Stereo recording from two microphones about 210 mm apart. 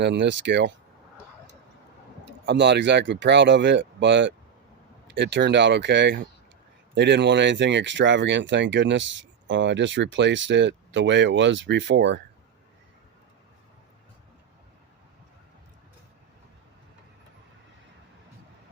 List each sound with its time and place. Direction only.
0.0 s speech: 55° right (ahead or behind)
2.5 s speech: 55° right (ahead or behind)